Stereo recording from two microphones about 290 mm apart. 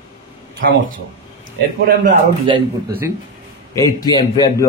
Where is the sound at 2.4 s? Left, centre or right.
Centre.